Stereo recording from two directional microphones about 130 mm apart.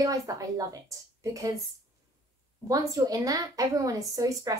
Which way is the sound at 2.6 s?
25° right (ahead or behind).